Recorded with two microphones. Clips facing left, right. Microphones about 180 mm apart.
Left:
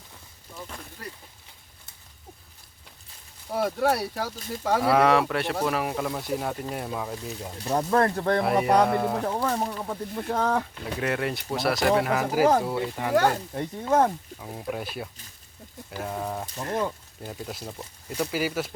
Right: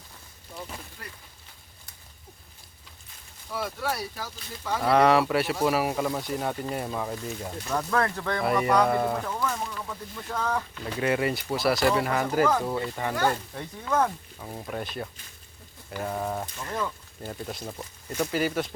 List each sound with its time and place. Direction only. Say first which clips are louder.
3.5 s speech: left 7 dB; 55° left (ahead or behind)
4.8 s speech: right 1 dB; 5° left (ahead or behind)
7.6 s speech: left 4 dB; 30° left (ahead or behind)
8.5 s speech: left 1 dB; 55° left (ahead or behind)
8.9 s speech: even; centre (ahead or behind)
9.3 s speech: left 4 dB; 35° left (ahead or behind)
10.2 s speech: left 4 dB; 55° left (ahead or behind)
11.0 s speech: right 3 dB; centre (ahead or behind)
13.3 s speech: left 5 dB; 30° left (ahead or behind)
14.3 s speech: left 2 dB; 5° left (ahead or behind)
16.6 s speech: left 4 dB; 40° left (ahead or behind)
17.2 s speech: right 1 dB; 5° left (ahead or behind)